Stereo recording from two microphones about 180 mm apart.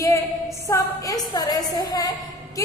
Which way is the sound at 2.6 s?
20° left (ahead or behind).